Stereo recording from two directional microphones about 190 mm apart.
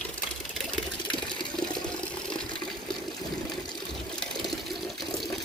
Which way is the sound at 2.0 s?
5° left (ahead or behind).